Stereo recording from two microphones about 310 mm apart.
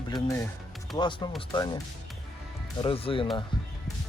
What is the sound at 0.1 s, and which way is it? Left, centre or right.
Speech, centre.